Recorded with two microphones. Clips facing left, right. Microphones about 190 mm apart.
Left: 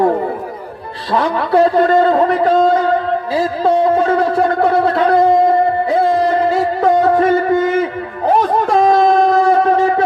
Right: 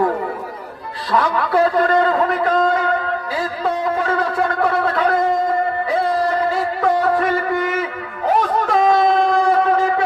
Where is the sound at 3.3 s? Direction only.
30° left (ahead or behind).